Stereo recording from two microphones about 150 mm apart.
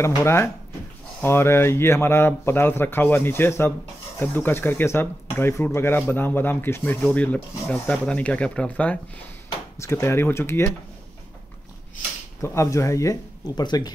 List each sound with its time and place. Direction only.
0.0 s speech: 15° left (ahead or behind)
12.4 s speech: 20° left (ahead or behind)